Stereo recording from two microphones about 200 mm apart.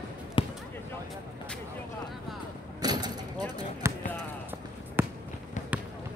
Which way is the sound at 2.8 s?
20° right (ahead or behind).